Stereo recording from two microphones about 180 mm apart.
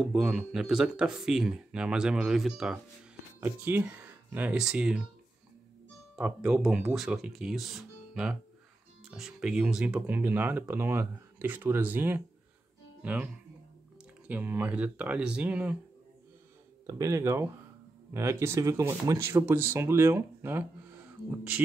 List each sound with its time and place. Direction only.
0.0 s speech: 5° right (ahead or behind)
6.1 s speech: 5° right (ahead or behind)
16.8 s speech: 20° right (ahead or behind)